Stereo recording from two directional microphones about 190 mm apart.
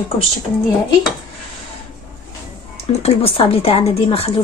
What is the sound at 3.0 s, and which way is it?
Speech, 30° left (ahead or behind).